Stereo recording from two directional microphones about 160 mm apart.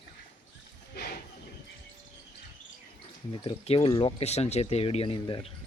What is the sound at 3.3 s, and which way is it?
Speech, 35° left (ahead or behind).